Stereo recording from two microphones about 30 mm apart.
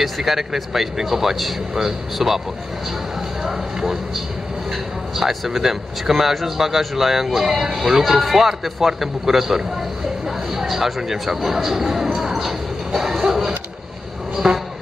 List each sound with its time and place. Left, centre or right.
0.2 s speech: centre
3.4 s speech: centre
5.1 s speech: centre
12.2 s a sound: centre
14.3 s speech: centre